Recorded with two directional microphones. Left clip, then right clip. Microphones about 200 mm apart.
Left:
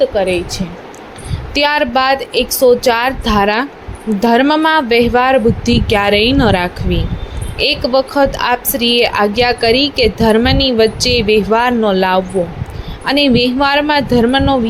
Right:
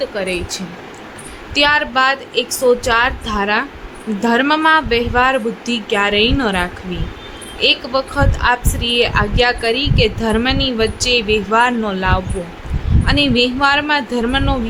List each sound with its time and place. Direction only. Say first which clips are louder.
0.0 s a woman's voice: left 7 dB; 15° left (ahead or behind)